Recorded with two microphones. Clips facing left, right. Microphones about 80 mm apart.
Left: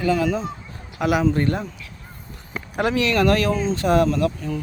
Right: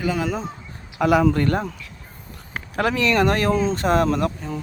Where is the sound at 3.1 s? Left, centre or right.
Right.